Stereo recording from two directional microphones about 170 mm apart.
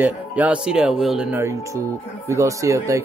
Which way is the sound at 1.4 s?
15° right (ahead or behind).